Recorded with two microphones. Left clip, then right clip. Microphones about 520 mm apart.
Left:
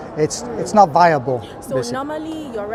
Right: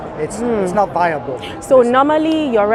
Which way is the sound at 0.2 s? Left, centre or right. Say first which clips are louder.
Right 3 dB; left.